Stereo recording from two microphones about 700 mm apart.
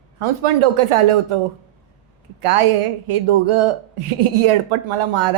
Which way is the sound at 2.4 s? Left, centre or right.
Right.